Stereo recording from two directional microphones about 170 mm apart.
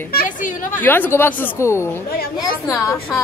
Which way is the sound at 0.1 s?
55° left (ahead or behind).